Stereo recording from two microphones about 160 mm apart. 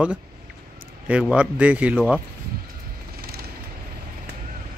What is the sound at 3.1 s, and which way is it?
Vehicle, 75° right (ahead or behind).